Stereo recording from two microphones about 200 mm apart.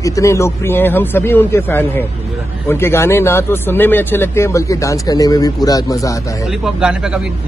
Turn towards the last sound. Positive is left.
turn(degrees=-5)  # may be behind; listen again after turning